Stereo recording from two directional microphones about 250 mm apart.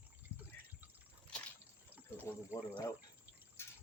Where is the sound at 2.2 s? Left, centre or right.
Centre.